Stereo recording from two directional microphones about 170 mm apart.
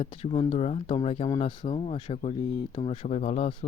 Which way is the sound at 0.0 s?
35° left (ahead or behind).